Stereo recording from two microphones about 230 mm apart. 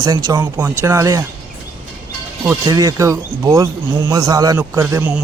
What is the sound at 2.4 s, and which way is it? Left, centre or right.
Speech, centre.